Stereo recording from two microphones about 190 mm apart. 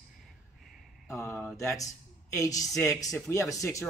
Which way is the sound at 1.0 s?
10° left (ahead or behind).